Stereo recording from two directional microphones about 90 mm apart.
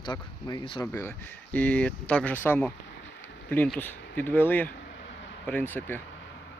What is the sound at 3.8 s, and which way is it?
Speech, 20° left (ahead or behind).